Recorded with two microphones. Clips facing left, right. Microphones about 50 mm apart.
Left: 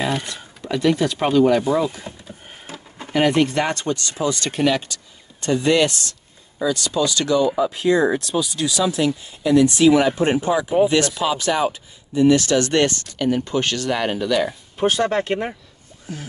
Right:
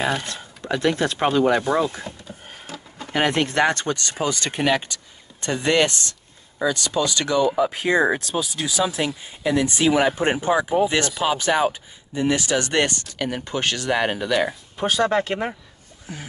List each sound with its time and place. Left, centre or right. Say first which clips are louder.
0.7 s speech: left 2 dB; right
3.1 s speech: left 4 dB; right
4.4 s speech: left 1 dB; right
15.0 s speech: even; centre